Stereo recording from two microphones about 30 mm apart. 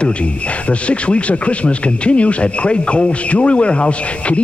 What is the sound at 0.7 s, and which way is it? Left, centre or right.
Speech, left.